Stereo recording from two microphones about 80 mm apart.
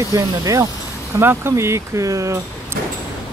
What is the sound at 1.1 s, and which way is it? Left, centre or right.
Speech, right.